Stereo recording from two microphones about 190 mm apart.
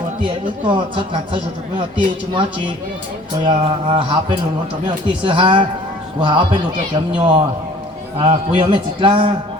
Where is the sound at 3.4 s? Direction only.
30° right (ahead or behind).